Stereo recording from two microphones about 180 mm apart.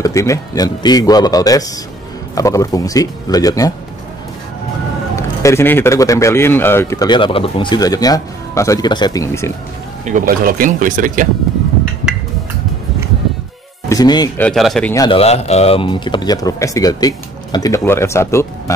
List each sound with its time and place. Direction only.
0.0 s speech: 15° left (ahead or behind)
5.1 s speech: 15° left (ahead or behind)
10.0 s speech: 50° right (ahead or behind)
13.8 s speech: 20° left (ahead or behind)
14.4 s speech: centre (ahead or behind)
15.0 s speech: 35° left (ahead or behind); by 18.5 s 15° left (ahead or behind)